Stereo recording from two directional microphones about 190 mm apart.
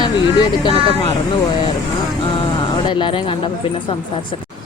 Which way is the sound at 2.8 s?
25° left (ahead or behind).